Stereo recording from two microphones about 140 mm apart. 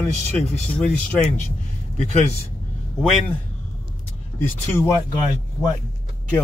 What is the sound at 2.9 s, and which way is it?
Speech, centre (ahead or behind).